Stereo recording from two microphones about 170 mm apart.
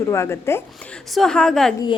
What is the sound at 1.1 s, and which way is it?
Speech, 5° left (ahead or behind).